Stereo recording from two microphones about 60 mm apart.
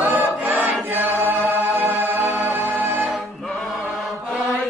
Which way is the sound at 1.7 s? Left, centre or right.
Right.